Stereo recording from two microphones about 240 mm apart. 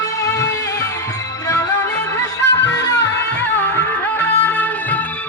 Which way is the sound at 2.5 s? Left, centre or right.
Left.